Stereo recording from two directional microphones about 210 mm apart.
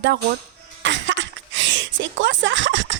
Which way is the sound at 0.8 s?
60° right (ahead or behind).